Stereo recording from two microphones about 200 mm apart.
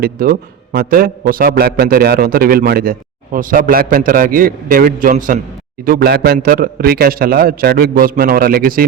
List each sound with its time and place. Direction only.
0.0 s a man's voice: 45° right (ahead or behind)